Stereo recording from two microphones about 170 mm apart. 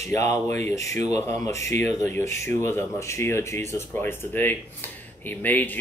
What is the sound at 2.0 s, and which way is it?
Speech, 15° left (ahead or behind).